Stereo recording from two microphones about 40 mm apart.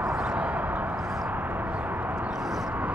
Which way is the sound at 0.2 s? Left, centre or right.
Right.